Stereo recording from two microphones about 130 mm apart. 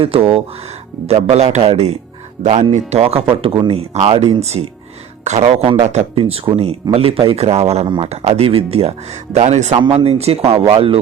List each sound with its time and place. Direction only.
0.0 s speech: 45° right (ahead or behind)
7.9 s speech: 40° right (ahead or behind)
8.1 s speech: 55° right (ahead or behind)
9.7 s speech: 40° right (ahead or behind)